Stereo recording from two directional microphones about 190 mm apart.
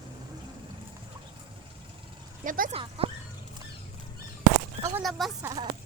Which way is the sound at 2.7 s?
30° right (ahead or behind).